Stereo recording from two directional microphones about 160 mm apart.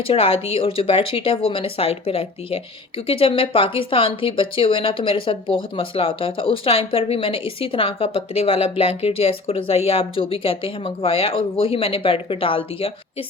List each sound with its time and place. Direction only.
0.0 s speech: 35° left (ahead or behind)